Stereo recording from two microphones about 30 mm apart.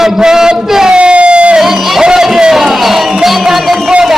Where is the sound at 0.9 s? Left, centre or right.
Right.